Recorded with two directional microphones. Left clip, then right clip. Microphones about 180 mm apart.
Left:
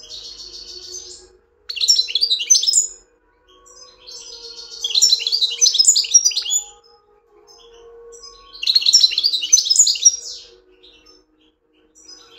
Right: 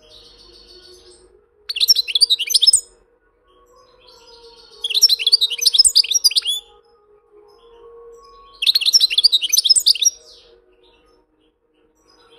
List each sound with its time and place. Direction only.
1.7 s chirp: 35° right (ahead or behind)
4.8 s chirp: 35° right (ahead or behind)
8.5 s chirp: 35° right (ahead or behind)